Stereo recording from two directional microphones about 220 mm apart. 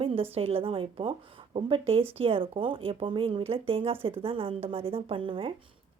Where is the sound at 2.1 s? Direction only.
25° right (ahead or behind).